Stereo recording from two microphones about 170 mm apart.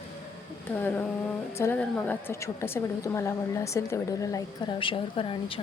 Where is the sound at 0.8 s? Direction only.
10° left (ahead or behind).